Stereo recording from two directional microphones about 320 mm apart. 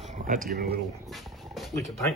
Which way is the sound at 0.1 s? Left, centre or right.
Right.